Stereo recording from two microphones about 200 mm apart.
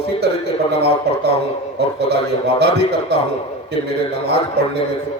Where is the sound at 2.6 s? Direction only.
55° right (ahead or behind).